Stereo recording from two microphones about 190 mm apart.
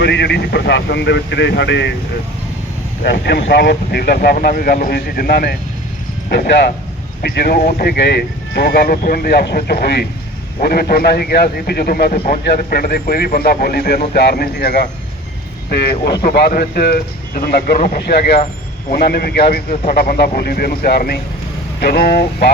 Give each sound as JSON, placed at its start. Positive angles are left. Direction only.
{"t": 0.0, "sound": "speech", "side_deg": 65}
{"t": 3.0, "sound": "a man's voice", "side_deg": 55}
{"t": 7.2, "sound": "a man's voice", "side_deg": 50}
{"t": 8.5, "sound": "a man's voice", "side_deg": 55}
{"t": 19.7, "sound": "a man's voice", "side_deg": 45}